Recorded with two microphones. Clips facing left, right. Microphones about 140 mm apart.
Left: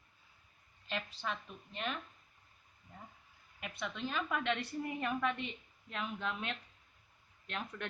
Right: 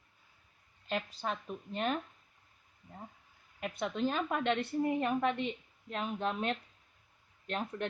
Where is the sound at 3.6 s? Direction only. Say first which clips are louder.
Right 8 dB; 40° right (ahead or behind).